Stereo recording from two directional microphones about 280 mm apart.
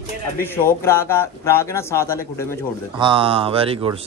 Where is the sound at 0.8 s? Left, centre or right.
Centre.